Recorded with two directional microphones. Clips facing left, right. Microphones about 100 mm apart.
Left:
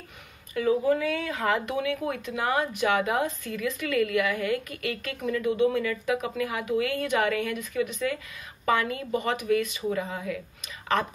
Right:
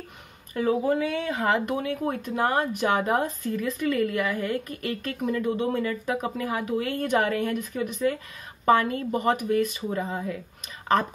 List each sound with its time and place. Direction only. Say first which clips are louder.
0.6 s speech: even; 35° right (ahead or behind)